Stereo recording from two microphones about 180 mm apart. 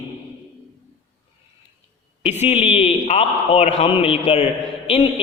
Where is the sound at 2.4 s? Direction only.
35° left (ahead or behind).